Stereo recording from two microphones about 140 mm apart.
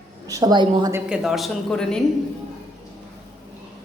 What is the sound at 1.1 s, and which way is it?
Speech, centre (ahead or behind).